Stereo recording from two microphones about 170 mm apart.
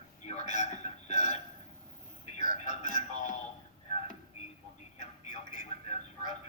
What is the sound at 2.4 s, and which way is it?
Music, 45° left (ahead or behind).